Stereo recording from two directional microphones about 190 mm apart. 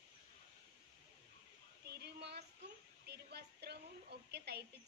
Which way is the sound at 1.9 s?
60° right (ahead or behind).